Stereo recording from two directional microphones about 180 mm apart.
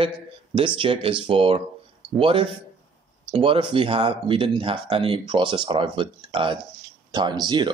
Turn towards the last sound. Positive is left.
turn(degrees=-25)  # may be behind; listen again after turning